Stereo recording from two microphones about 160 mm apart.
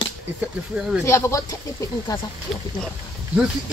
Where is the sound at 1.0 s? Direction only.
15° left (ahead or behind).